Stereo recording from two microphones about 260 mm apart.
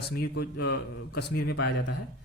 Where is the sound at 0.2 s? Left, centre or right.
Left.